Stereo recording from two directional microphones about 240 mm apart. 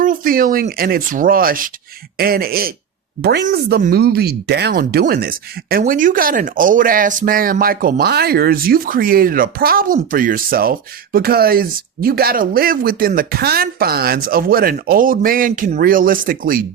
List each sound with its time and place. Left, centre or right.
0.0 s speech: right